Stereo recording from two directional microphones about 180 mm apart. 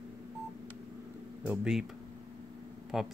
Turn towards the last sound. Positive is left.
turn(degrees=-5)  # may be behind; listen again after turning